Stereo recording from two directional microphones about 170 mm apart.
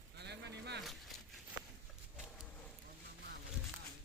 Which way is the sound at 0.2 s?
80° right.